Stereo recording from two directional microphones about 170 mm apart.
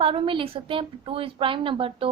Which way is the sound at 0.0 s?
30° right (ahead or behind).